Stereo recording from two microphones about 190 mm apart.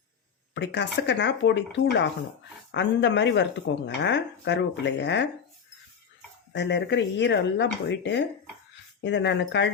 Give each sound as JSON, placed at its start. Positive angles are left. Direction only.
{"t": 0.5, "sound": "speech", "side_deg": 65}
{"t": 6.5, "sound": "speech", "side_deg": 65}